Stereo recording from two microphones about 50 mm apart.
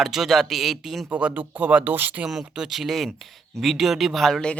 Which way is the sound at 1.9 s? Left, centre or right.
Right.